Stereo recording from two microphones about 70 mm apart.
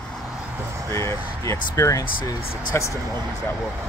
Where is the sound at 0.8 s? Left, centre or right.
Left.